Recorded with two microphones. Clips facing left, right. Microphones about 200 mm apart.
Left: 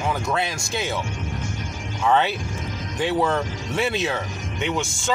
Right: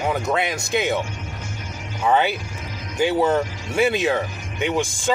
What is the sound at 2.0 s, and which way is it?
A man's voice, 10° right (ahead or behind).